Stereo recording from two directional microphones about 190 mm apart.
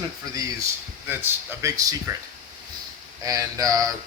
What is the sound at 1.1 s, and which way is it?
Speech, 15° right (ahead or behind).